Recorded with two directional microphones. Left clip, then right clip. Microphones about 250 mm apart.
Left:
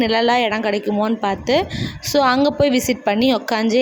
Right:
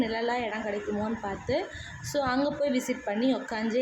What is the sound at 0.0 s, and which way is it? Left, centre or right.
A woman's voice, left.